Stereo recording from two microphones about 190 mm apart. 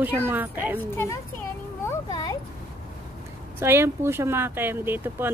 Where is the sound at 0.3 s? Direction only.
10° right (ahead or behind).